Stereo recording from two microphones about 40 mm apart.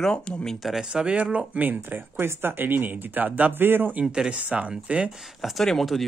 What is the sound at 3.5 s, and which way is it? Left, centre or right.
Speech, right.